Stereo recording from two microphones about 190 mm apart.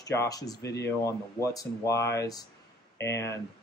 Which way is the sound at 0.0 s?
15° left (ahead or behind).